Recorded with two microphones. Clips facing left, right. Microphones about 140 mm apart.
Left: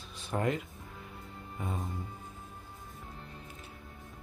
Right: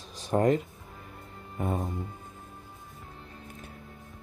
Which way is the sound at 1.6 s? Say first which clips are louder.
Right 8 dB; 55° right (ahead or behind).